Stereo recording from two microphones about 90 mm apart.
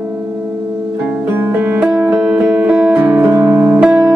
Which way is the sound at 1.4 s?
20° right (ahead or behind).